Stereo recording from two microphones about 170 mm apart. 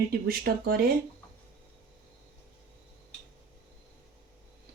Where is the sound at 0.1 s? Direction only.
65° right (ahead or behind).